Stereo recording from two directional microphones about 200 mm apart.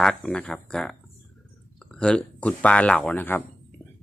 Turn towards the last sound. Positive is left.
turn(degrees=10)  # may be behind; listen again after turning